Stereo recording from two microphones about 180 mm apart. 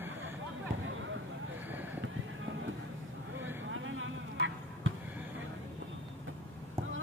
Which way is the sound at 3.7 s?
90° right.